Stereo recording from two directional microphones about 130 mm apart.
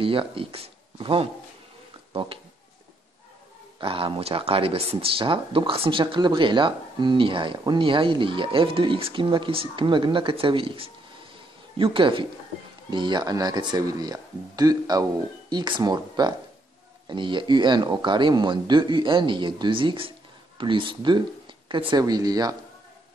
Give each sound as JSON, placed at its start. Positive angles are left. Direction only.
{"t": 0.0, "sound": "speech", "side_deg": -45}
{"t": 3.8, "sound": "speech", "side_deg": -45}